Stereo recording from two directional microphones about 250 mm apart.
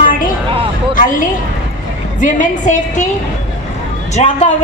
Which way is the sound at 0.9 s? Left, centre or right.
Left.